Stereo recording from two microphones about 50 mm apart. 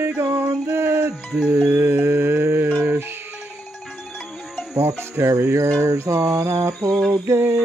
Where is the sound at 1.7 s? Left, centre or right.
Right.